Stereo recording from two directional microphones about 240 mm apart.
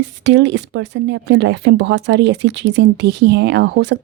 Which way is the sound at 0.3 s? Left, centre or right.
Right.